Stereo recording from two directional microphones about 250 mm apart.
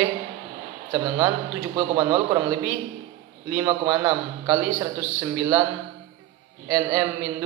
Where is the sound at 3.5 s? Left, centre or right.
Centre.